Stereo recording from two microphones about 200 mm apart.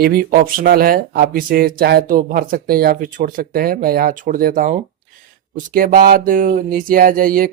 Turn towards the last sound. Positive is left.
turn(degrees=-45)  # may be behind; listen again after turning